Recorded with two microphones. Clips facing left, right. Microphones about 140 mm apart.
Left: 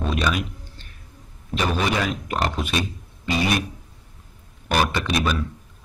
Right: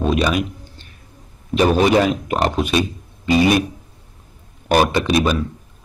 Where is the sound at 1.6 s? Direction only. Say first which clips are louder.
Right 9 dB; 40° right (ahead or behind).